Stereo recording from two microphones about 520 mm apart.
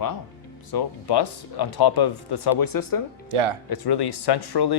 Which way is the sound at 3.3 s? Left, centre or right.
Right.